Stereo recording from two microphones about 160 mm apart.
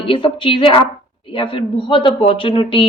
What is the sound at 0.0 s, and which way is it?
A woman's voice, 35° left (ahead or behind).